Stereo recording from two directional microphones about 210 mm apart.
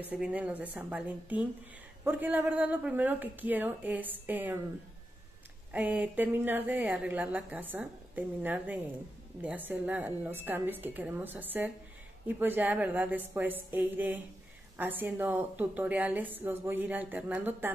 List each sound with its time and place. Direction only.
0.1 s a woman's voice: 5° right (ahead or behind)
5.7 s a woman's voice: 5° right (ahead or behind)